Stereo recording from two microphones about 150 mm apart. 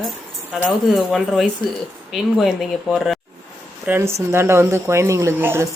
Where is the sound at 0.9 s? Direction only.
Centre (ahead or behind).